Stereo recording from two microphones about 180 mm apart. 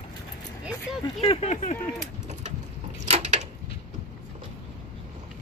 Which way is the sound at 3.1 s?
40° right (ahead or behind).